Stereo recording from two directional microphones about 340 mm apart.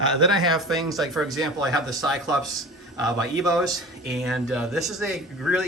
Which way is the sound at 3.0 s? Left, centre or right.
Centre.